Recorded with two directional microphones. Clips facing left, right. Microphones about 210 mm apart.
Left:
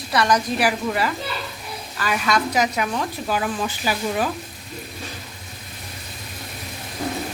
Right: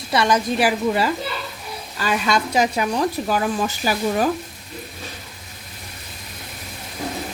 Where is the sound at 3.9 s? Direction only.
45° right (ahead or behind).